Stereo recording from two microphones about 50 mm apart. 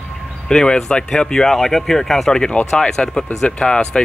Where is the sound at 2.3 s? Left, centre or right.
Centre.